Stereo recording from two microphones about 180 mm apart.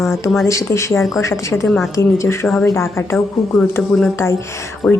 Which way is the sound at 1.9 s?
15° left (ahead or behind).